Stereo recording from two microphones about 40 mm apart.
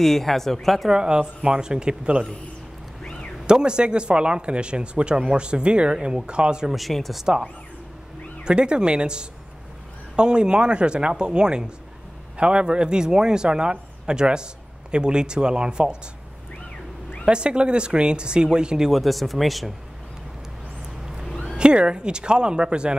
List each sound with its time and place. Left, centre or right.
0.0 s speech: centre
0.8 s speech: centre
3.0 s a sound: left
3.4 s speech: right
6.7 s speech: centre
8.5 s speech: right
17.3 s speech: right
18.9 s speech: centre
21.5 s speech: right